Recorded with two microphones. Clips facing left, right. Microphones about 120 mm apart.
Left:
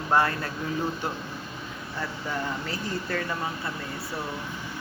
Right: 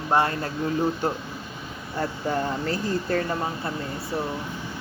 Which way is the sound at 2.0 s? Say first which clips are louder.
Right 6 dB; 35° right (ahead or behind).